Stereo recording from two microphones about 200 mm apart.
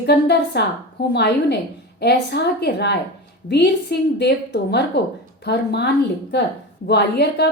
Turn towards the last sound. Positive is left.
turn(degrees=55)  # may be behind; listen again after turning